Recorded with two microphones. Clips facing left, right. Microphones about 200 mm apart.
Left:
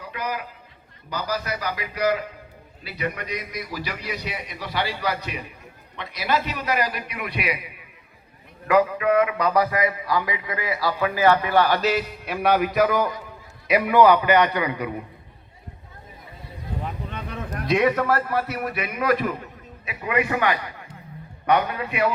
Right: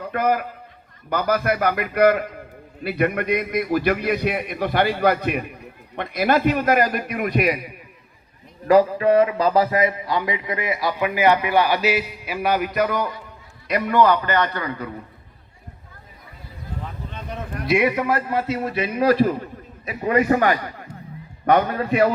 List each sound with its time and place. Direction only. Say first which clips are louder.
0.0 s a man's voice: right 9 dB; 50° right (ahead or behind)
8.6 s a man's voice: right 4 dB; 35° right (ahead or behind); by 15.0 s 15° left (ahead or behind)
17.7 s a man's voice: right 1 dB; 10° right (ahead or behind); by 22.1 s 40° right (ahead or behind)